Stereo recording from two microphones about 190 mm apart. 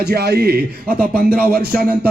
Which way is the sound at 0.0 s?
60° right (ahead or behind).